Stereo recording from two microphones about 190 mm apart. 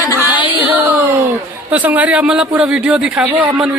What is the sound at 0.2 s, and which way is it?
Music, 10° right (ahead or behind).